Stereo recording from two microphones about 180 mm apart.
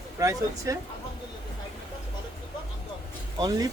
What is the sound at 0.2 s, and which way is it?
Speech, 20° right (ahead or behind).